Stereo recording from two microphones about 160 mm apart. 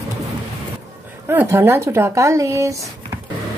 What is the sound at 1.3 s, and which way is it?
A woman's voice, 15° right (ahead or behind).